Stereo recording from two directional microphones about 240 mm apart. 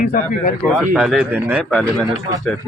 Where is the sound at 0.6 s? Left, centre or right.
Centre.